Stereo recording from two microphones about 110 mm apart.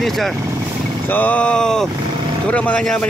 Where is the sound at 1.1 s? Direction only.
15° left (ahead or behind).